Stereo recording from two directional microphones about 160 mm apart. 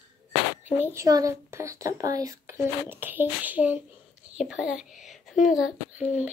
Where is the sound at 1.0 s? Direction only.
20° right (ahead or behind).